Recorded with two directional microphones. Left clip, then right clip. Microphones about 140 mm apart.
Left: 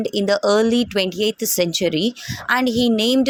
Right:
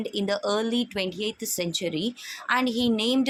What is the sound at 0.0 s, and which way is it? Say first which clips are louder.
A woman's voice: left 9 dB; 45° left (ahead or behind).